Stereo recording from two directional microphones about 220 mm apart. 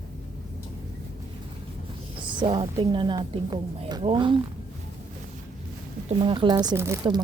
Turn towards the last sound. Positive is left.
turn(degrees=-15)  # may be behind; listen again after turning